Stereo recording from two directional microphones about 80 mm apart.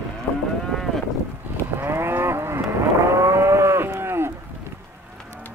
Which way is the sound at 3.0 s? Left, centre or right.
Right.